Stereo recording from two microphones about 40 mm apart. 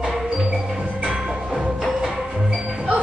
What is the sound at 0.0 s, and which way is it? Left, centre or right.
Music, centre.